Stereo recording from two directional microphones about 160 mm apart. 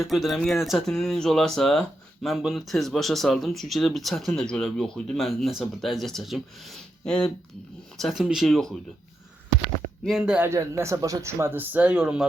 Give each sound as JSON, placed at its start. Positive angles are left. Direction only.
{"t": 0.0, "sound": "speech", "side_deg": 0}
{"t": 10.0, "sound": "speech", "side_deg": 0}
{"t": 10.5, "sound": "speech", "side_deg": -15}